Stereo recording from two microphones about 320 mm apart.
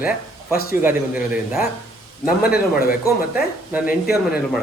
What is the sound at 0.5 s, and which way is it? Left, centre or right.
Speech, left.